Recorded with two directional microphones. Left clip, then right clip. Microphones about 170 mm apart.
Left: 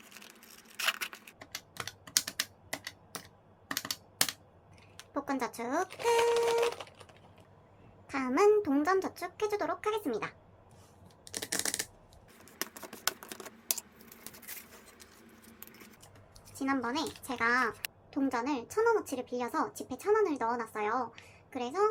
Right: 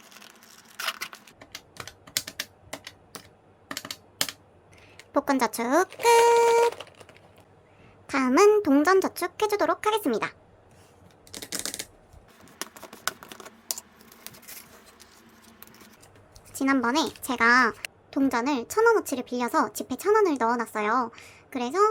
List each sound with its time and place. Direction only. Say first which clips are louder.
0.1 s a sound: right 4 dB; 5° right (ahead or behind)
1.5 s typing: even; 5° left (ahead or behind)
3.7 s computer keyboard: right 1 dB; 5° left (ahead or behind)
5.1 s a woman's voice: right 11 dB; 50° right (ahead or behind)
6.7 s a sound: right 4 dB; 15° right (ahead or behind)
8.0 s a woman's voice: right 7 dB; 45° right (ahead or behind)
11.5 s typing: right 1 dB; centre (ahead or behind)
15.4 s a sound: right 3 dB; centre (ahead or behind)
16.6 s a woman's voice: right 9 dB; 50° right (ahead or behind)